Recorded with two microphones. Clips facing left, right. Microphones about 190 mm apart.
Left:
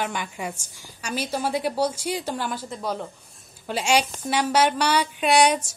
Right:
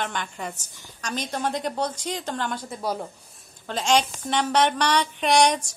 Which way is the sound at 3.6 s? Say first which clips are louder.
Even; 10° left (ahead or behind).